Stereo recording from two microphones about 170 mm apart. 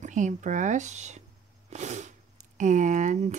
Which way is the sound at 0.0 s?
45° right (ahead or behind).